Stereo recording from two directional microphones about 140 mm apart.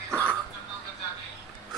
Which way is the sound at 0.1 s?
10° left (ahead or behind).